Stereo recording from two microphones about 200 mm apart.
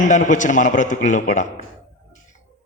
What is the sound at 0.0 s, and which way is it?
A man's voice, 40° left (ahead or behind).